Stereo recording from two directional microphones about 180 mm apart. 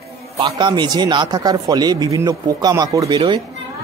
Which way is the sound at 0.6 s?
25° right (ahead or behind).